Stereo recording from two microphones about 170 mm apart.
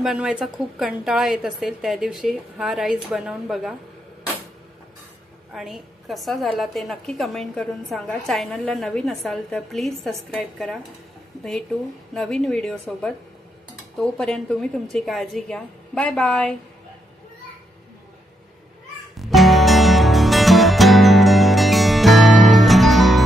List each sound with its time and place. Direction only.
0.0 s a woman's voice: 5° right (ahead or behind)
5.5 s a woman's voice: centre (ahead or behind)
12.1 s a woman's voice: 5° left (ahead or behind)
19.1 s music: centre (ahead or behind)